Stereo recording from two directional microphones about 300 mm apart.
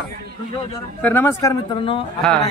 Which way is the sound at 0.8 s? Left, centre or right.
Centre.